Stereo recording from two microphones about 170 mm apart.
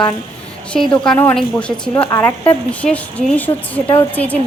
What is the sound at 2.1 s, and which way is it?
Speech, 15° left (ahead or behind).